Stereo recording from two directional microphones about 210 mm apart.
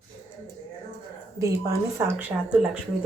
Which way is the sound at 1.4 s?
15° right (ahead or behind).